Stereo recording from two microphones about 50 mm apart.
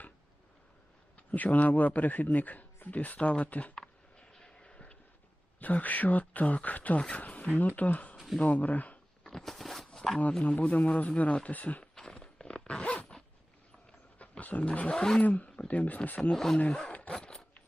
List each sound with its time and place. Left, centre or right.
1.1 s a man's voice: left
3.8 s a sound: centre
5.5 s a man's voice: left
9.2 s a sound: centre
10.4 s speech: left
11.8 s zipper: centre
14.2 s speech: left; by 15.2 s centre
15.2 s a man's voice: left
16.3 s speech: centre
16.6 s a sound: left
17.2 s wood: centre